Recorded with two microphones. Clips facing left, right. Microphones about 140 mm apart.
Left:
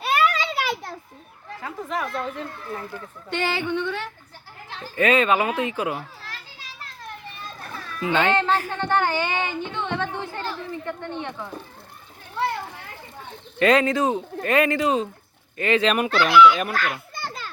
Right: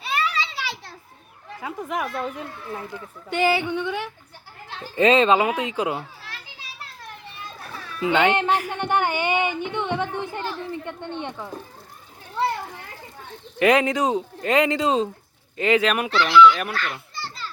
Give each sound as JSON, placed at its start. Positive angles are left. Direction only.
{"t": 0.0, "sound": "a sound", "side_deg": 55}
{"t": 1.6, "sound": "a child's voice", "side_deg": -10}
{"t": 7.6, "sound": "a child's voice", "side_deg": -10}
{"t": 13.6, "sound": "a child's voice", "side_deg": -15}
{"t": 16.0, "sound": "speech", "side_deg": 50}
{"t": 16.7, "sound": "children playing", "side_deg": 45}